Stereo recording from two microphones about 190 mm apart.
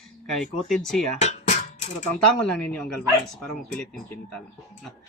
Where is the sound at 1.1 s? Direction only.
35° left (ahead or behind).